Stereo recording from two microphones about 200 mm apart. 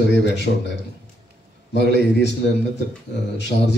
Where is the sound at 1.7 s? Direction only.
60° left (ahead or behind).